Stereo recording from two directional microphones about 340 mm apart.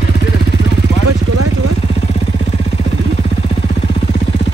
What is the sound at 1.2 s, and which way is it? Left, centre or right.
Vehicle, right.